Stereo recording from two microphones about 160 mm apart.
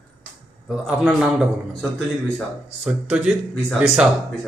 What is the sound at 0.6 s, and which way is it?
A man's voice, centre (ahead or behind).